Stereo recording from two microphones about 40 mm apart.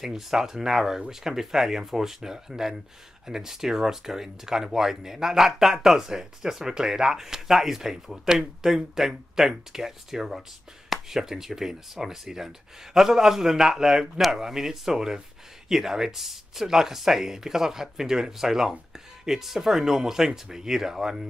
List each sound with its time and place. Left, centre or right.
0.0 s speech: centre